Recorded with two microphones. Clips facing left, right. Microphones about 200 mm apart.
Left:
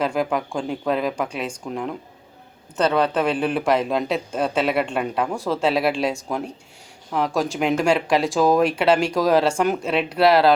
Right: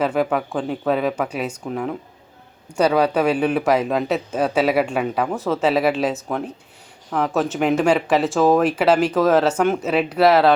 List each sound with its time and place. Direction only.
0.0 s speech: 5° right (ahead or behind)
7.3 s speech: centre (ahead or behind)